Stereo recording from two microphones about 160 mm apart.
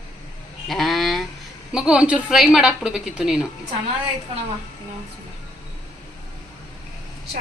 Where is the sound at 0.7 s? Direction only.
Centre (ahead or behind).